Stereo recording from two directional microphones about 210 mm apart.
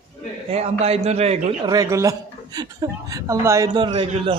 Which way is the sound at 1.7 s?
15° right (ahead or behind).